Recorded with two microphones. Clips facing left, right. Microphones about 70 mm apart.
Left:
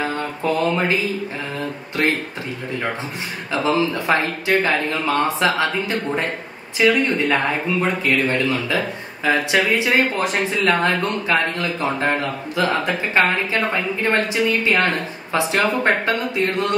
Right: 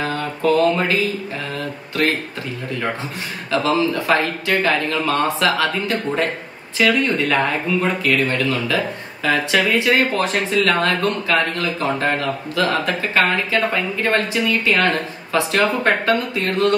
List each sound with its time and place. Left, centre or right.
0.4 s speech: left
2.0 s speech: left
3.5 s speech: left